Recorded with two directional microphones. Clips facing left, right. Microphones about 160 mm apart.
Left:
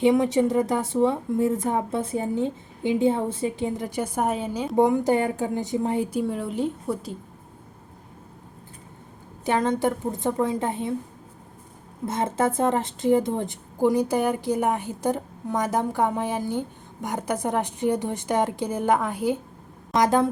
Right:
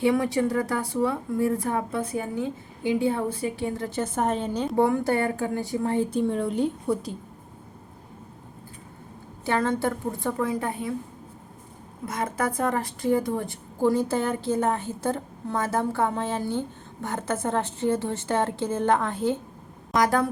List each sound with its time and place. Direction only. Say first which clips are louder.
0.0 s speech: left 3 dB; 20° left (ahead or behind)
4.7 s a woman's voice: left 3 dB; 20° left (ahead or behind); by 7.2 s centre (ahead or behind)
9.4 s speech: left 2 dB; 20° left (ahead or behind)
12.0 s a woman's voice: left 4 dB; 25° left (ahead or behind)